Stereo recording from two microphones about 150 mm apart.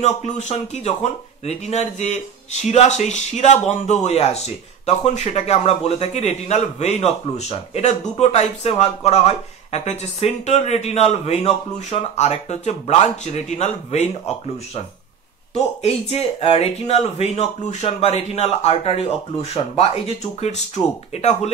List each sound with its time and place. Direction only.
0.0 s speech: 50° left (ahead or behind)
15.5 s speech: 45° left (ahead or behind)